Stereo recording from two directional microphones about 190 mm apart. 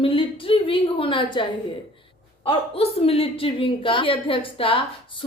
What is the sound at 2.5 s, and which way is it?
A woman's voice, 30° left (ahead or behind).